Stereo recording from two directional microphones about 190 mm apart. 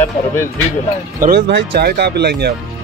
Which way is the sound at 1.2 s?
60° right (ahead or behind).